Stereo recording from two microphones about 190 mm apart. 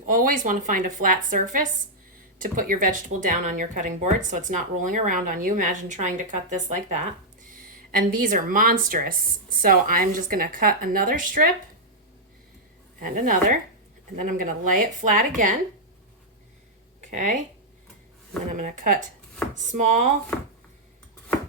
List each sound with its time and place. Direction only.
0.0 s a woman's voice: 45° right (ahead or behind)
13.0 s speech: 45° right (ahead or behind)
17.0 s speech: 40° right (ahead or behind)
18.5 s speech: 45° right (ahead or behind)